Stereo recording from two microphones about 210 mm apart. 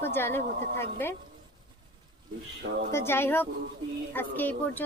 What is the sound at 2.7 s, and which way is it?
Speech, 50° right (ahead or behind).